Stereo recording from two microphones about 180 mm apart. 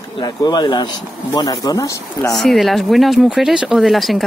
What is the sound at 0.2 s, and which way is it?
Speech, 25° left (ahead or behind).